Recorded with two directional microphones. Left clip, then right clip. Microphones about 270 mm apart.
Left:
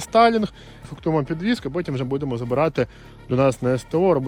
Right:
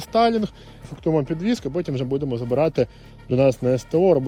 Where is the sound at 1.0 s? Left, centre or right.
Left.